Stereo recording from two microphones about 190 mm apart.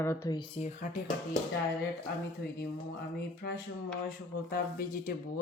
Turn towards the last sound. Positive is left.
turn(degrees=50)  # may be behind; listen again after turning